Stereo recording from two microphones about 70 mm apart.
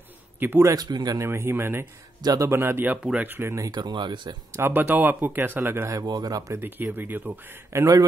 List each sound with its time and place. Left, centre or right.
0.4 s a man's voice: right
0.7 s speech: right
1.1 s speech: right
3.0 s speech: centre
3.3 s speech: right
3.7 s speech: right
4.5 s speech: right
6.0 s speech: right
6.5 s speech: right
7.7 s a man's voice: right